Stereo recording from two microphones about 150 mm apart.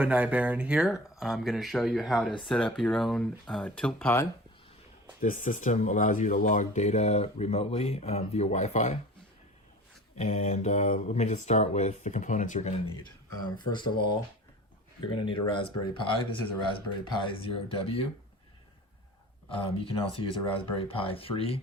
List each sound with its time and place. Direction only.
0.0 s speech: 10° right (ahead or behind); by 4.3 s 15° left (ahead or behind)
5.2 s speech: 60° left (ahead or behind)
10.2 s speech: 50° left (ahead or behind)
13.6 s speech: 30° left (ahead or behind)
19.5 s speech: 35° left (ahead or behind)